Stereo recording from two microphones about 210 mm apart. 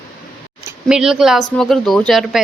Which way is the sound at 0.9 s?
5° right (ahead or behind).